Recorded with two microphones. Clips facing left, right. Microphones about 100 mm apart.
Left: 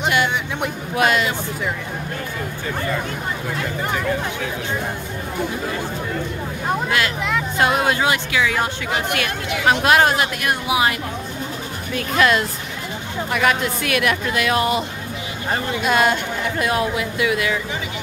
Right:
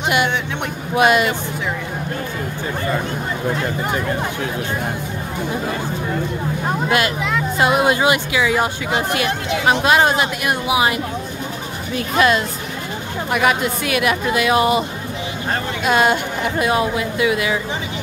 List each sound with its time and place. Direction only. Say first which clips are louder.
0.9 s speech: right 4 dB; 10° right (ahead or behind)
7.2 s speech: right 2 dB; 5° right (ahead or behind)
8.9 s speech: right 3 dB; 20° right (ahead or behind)
9.8 s speech: even; centre (ahead or behind)
12.2 s speech: right 1 dB; 5° right (ahead or behind)